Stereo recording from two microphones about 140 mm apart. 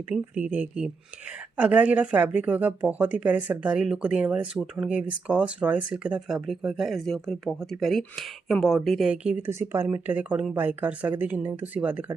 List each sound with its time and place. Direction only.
0.1 s speech: 10° right (ahead or behind)
9.5 s speech: 20° right (ahead or behind)